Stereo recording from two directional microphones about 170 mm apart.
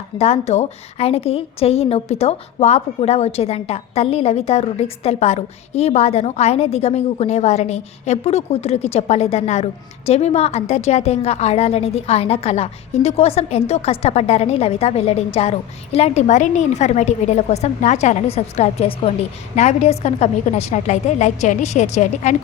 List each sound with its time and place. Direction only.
0.2 s a woman's voice: 40° left (ahead or behind)